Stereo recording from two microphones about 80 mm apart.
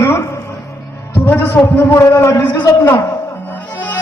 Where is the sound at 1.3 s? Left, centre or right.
Left.